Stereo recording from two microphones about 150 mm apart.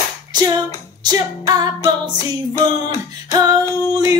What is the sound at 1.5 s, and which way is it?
Female singing, 25° right (ahead or behind).